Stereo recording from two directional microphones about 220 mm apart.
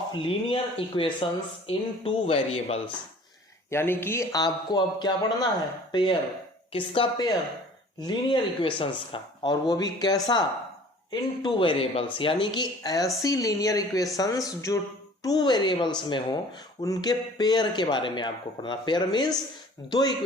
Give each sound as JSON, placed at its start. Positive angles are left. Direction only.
{"t": 0.1, "sound": "speech", "side_deg": 25}
{"t": 3.7, "sound": "a man's voice", "side_deg": 10}